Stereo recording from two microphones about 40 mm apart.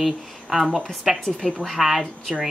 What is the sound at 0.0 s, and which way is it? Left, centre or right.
Speech, centre.